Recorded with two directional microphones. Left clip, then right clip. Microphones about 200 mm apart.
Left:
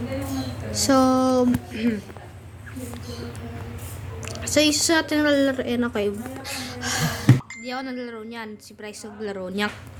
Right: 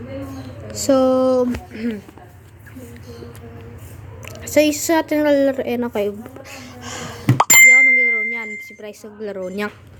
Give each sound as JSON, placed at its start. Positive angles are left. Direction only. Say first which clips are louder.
{"t": 0.7, "sound": "speech", "louder": "right 4 dB", "side_deg": -15}
{"t": 4.4, "sound": "a woman's voice", "louder": "right 4 dB", "side_deg": -20}
{"t": 6.4, "sound": "bicycle bell", "louder": "left 4 dB", "side_deg": -10}